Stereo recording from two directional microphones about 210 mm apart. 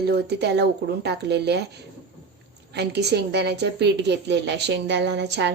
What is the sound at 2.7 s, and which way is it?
A woman's voice, 50° right (ahead or behind).